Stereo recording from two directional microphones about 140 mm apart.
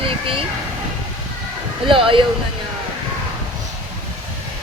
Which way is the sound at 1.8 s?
40° right (ahead or behind).